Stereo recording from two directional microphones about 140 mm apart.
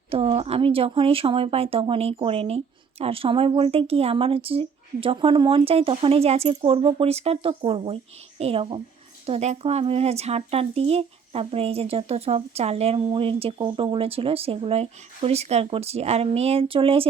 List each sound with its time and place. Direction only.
0.1 s speech: 45° right (ahead or behind)